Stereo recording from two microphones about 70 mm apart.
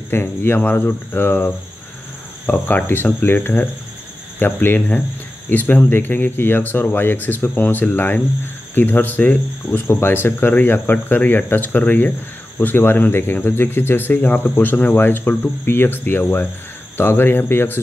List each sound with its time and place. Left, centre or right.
0.1 s speech: left